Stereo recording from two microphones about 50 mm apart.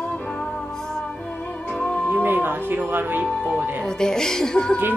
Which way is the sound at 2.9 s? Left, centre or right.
Right.